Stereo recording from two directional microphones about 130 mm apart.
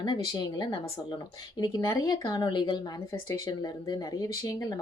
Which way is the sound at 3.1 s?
15° left (ahead or behind).